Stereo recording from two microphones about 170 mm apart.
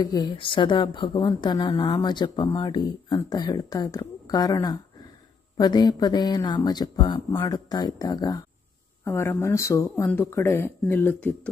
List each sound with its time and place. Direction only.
0.0 s speech: 25° left (ahead or behind)